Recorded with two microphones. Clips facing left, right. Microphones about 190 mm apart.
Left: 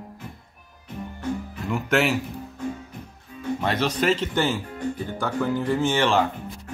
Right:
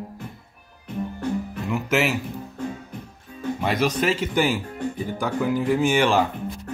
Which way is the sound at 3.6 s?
10° right (ahead or behind).